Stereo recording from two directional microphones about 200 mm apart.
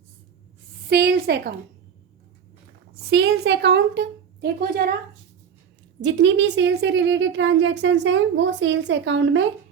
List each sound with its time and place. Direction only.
0.9 s a woman's voice: 55° right (ahead or behind)
3.1 s a woman's voice: 55° right (ahead or behind)
6.0 s a woman's voice: 65° right (ahead or behind)